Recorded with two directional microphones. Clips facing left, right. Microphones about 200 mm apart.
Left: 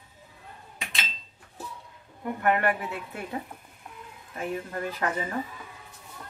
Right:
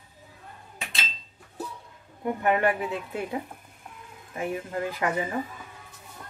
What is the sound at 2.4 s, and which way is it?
Speech, 20° right (ahead or behind).